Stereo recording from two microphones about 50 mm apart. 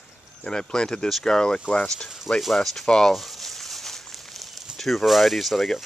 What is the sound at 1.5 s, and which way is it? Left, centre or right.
Speech, left.